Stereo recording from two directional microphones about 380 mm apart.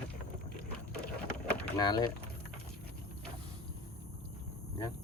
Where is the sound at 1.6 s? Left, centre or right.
Centre.